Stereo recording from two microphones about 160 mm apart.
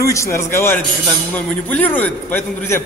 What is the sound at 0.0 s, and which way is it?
A man's voice, 20° left (ahead or behind).